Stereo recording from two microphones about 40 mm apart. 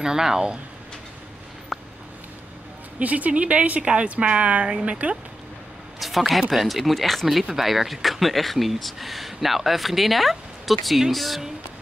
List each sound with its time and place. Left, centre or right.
0.0 s speech: centre
1.7 s a sound: centre
3.0 s speech: right
5.9 s speech: centre